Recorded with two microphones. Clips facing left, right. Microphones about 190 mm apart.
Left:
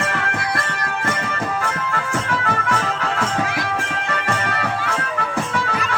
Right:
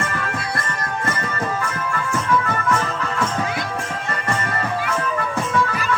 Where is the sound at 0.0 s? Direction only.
75° left (ahead or behind).